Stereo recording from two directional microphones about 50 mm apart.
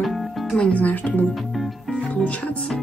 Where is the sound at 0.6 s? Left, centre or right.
Left.